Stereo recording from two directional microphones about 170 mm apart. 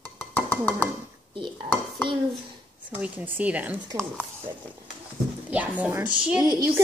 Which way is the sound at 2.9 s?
10° right (ahead or behind).